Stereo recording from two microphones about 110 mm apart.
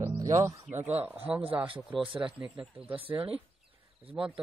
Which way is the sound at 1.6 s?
50° right (ahead or behind).